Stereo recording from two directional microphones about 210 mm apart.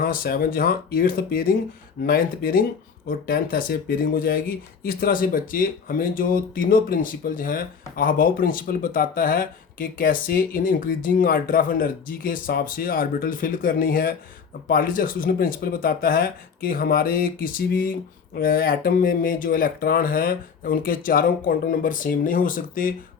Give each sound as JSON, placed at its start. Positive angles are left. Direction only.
{"t": 0.0, "sound": "speech", "side_deg": 45}